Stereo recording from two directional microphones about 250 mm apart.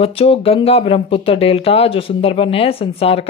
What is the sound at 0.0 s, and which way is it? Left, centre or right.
A woman's voice, left.